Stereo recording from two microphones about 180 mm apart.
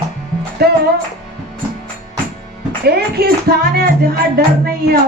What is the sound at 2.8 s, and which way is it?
A woman's voice, 60° right (ahead or behind).